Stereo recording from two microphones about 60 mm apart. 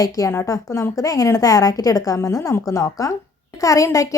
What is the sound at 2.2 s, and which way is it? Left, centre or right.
A woman's voice, left.